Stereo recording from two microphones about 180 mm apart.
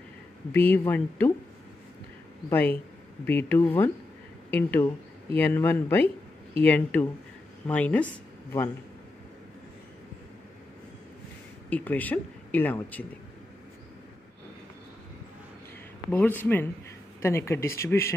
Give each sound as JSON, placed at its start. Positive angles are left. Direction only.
{"t": 0.5, "sound": "speech", "side_deg": 10}
{"t": 2.5, "sound": "speech", "side_deg": 10}
{"t": 11.7, "sound": "speech", "side_deg": 10}
{"t": 16.1, "sound": "speech", "side_deg": 10}